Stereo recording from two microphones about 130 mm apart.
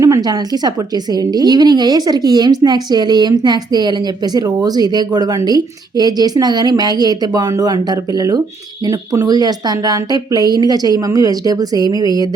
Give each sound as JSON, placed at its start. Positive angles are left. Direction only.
{"t": 0.0, "sound": "a woman's voice", "side_deg": -25}